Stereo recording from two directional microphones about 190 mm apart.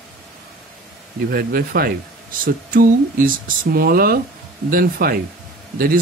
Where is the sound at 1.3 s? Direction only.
55° right (ahead or behind).